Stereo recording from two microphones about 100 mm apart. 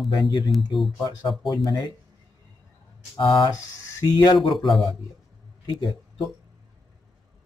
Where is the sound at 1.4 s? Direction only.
50° left (ahead or behind).